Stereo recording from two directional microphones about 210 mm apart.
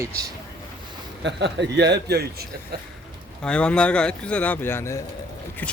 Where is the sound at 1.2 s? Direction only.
55° right (ahead or behind).